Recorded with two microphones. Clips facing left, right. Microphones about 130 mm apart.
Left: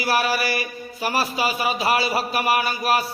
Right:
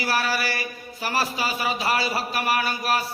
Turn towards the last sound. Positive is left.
turn(degrees=15)  # may be behind; listen again after turning